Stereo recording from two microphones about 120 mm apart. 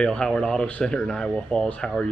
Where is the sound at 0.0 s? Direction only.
5° left (ahead or behind).